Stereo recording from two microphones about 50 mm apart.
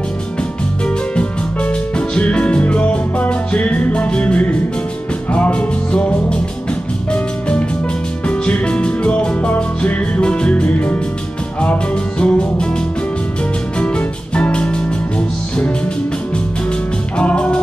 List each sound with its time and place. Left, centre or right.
0.8 s music: left
13.7 s music: left
17.2 s music: left